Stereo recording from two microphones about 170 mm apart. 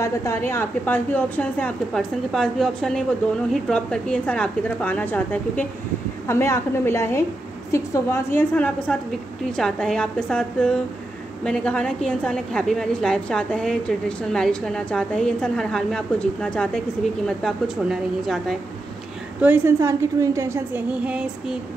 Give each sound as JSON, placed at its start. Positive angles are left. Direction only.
{"t": 0.0, "sound": "a woman's voice", "side_deg": 15}
{"t": 19.4, "sound": "a woman's voice", "side_deg": -15}